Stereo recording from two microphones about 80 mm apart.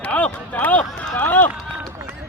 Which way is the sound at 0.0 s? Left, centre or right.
Centre.